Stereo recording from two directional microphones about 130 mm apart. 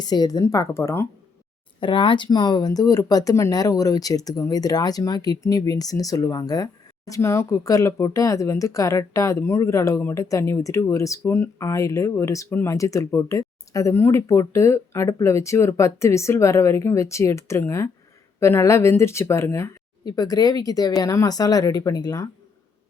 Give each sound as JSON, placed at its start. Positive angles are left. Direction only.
{"t": 0.0, "sound": "speech", "side_deg": 30}
{"t": 1.8, "sound": "speech", "side_deg": 40}